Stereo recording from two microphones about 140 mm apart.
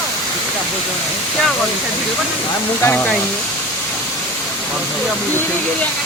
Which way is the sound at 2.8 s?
10° left (ahead or behind).